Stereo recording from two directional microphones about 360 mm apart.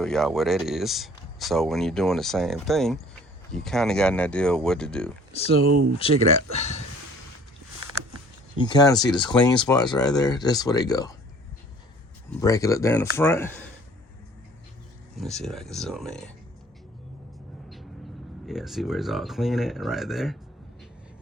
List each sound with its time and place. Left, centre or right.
0.0 s speech: centre
5.3 s speech: centre
5.7 s speech: right
8.5 s speech: centre
12.3 s speech: centre
15.2 s speech: centre
18.4 s speech: centre